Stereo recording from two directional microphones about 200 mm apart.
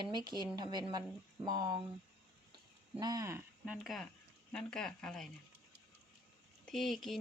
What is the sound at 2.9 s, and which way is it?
Speech, 20° right (ahead or behind).